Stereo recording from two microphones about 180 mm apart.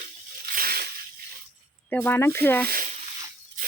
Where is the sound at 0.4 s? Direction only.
55° right (ahead or behind).